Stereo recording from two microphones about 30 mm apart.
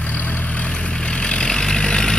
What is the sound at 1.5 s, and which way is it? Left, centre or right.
Vehicle, left.